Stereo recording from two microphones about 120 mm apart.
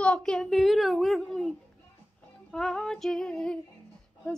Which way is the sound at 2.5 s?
5° left (ahead or behind).